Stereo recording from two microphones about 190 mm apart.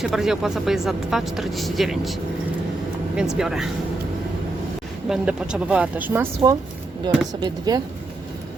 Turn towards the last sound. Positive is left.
turn(degrees=-20)  # may be behind; listen again after turning